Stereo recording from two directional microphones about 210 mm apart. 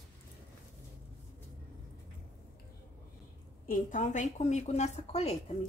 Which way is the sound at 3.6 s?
40° left (ahead or behind).